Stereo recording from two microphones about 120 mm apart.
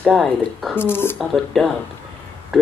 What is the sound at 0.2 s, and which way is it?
Speech, centre (ahead or behind).